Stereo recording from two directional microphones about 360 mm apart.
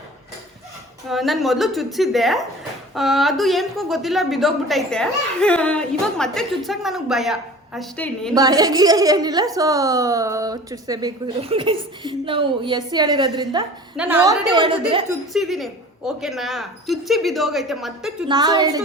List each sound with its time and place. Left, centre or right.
1.0 s a woman's voice: centre
8.4 s a woman's voice: centre
15.3 s a woman's voice: centre
18.3 s a woman's voice: centre